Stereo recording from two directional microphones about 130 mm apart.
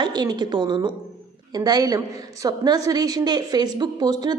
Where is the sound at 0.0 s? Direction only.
30° right (ahead or behind).